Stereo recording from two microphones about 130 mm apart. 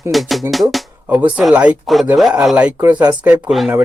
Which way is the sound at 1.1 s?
10° right (ahead or behind).